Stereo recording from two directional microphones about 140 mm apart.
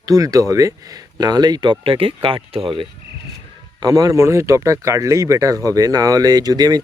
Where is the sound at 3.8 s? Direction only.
25° right (ahead or behind).